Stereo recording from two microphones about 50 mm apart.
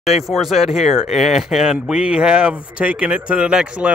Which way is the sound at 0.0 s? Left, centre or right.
Centre.